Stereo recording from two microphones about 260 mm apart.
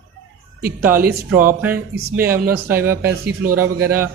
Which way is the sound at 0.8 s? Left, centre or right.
Centre.